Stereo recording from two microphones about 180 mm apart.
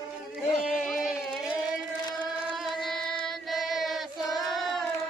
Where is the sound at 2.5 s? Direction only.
Centre (ahead or behind).